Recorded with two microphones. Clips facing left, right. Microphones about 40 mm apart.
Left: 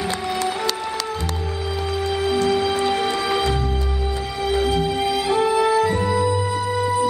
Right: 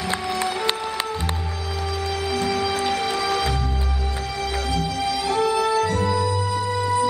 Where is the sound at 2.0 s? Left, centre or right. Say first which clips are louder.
Left 5 dB; centre.